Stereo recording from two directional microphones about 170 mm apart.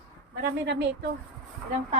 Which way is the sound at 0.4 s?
85° right.